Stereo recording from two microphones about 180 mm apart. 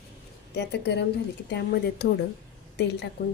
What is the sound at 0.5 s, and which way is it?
Speech, 70° left (ahead or behind).